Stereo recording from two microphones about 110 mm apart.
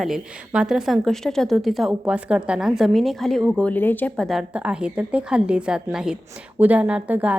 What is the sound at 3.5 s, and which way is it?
Speech, 15° left (ahead or behind).